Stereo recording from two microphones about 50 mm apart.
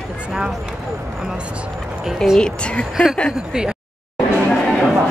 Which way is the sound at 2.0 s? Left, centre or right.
Centre.